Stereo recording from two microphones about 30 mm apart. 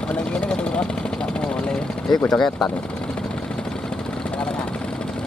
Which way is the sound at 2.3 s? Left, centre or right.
Centre.